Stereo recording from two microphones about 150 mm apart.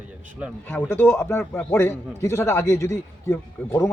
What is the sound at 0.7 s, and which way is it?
A man's voice, 15° left (ahead or behind).